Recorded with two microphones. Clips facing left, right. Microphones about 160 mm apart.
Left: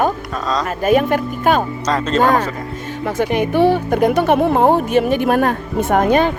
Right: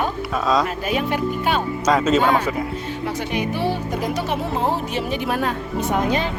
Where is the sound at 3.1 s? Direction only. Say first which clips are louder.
Left 8 dB; 50° left (ahead or behind).